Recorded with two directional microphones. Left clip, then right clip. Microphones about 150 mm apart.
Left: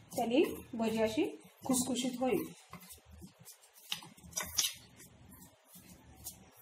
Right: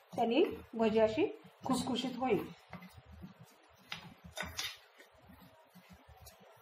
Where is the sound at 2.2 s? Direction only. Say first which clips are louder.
Even; 15° left (ahead or behind).